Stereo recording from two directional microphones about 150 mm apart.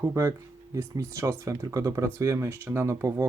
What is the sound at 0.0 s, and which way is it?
Speech, 20° right (ahead or behind).